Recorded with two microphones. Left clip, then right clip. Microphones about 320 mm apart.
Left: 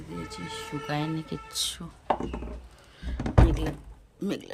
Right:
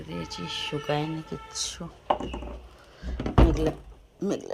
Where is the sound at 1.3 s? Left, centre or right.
Left.